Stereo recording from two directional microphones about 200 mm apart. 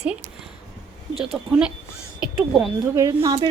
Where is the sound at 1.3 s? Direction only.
5° right (ahead or behind).